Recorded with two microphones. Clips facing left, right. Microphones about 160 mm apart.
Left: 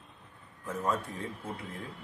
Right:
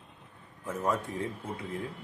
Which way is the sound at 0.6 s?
20° right (ahead or behind).